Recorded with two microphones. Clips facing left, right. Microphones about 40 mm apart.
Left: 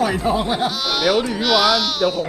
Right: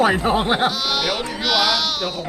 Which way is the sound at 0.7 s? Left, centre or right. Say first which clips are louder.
Left 4 dB; centre.